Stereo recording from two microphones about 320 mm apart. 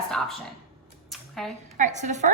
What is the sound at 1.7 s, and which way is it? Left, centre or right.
Speech, right.